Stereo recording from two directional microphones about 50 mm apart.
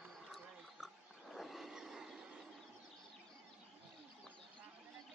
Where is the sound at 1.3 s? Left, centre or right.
Centre.